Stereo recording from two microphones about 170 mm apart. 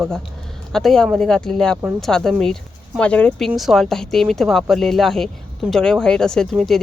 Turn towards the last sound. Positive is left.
turn(degrees=0)  # may be behind; listen again after turning